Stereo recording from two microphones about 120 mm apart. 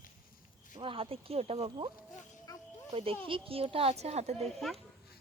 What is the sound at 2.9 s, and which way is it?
Speech, 50° right (ahead or behind).